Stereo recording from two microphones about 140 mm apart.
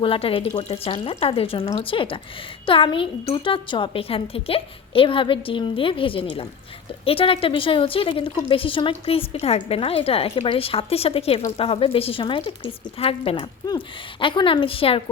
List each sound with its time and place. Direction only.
0.0 s a woman's voice: 40° left (ahead or behind)